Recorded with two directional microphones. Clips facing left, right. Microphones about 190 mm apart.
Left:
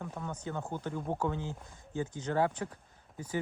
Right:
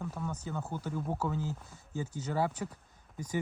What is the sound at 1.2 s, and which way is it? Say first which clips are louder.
Speech: even; 5° right (ahead or behind).